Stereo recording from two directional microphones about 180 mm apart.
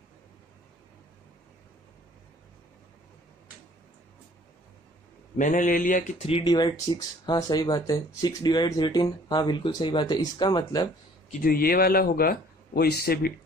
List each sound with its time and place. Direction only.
5.4 s speech: 45° left (ahead or behind)
6.2 s speech: 30° left (ahead or behind)
11.4 s speech: 55° left (ahead or behind)